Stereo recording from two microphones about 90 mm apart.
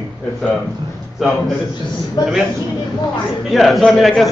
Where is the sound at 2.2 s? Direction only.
50° left (ahead or behind).